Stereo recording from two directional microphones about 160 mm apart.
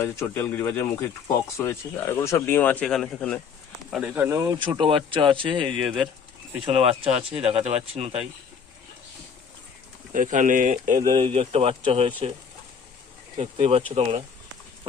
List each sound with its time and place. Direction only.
0.0 s speech: 15° left (ahead or behind)
3.9 s speech: 10° right (ahead or behind); by 5.7 s 30° right (ahead or behind)
5.8 s speech: 5° right (ahead or behind)
6.6 s speech: 35° right (ahead or behind)
10.1 s speech: 55° right (ahead or behind)
11.0 s speech: 30° right (ahead or behind)
13.3 s speech: 40° right (ahead or behind)